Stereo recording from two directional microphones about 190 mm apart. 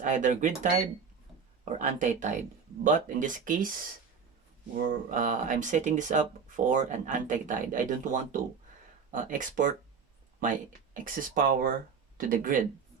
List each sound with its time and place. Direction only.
0.0 s speech: 40° right (ahead or behind)